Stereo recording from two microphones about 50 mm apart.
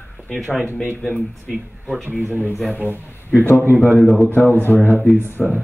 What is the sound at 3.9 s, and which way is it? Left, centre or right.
Speech, centre.